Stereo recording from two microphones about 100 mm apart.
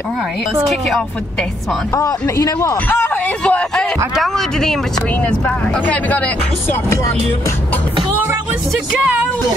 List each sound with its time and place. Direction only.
0.7 s speech: centre (ahead or behind)
2.0 s speech: 35° left (ahead or behind)
3.4 s speech: 10° left (ahead or behind)
5.9 s speech: 15° left (ahead or behind)